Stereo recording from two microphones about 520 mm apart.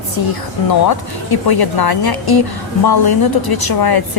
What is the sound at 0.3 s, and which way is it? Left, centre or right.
Speech, left.